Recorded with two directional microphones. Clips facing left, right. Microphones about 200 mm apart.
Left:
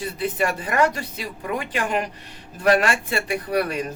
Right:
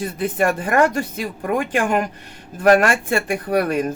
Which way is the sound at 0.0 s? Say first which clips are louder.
Right 4 dB; 50° right (ahead or behind).